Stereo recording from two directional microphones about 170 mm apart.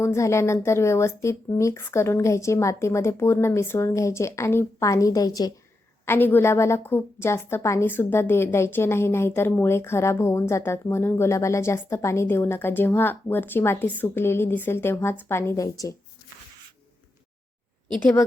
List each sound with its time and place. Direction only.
0.0 s a woman's voice: 15° left (ahead or behind)
18.0 s a woman's voice: 10° left (ahead or behind)